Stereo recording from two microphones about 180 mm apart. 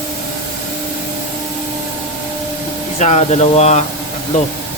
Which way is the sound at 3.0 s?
40° left (ahead or behind).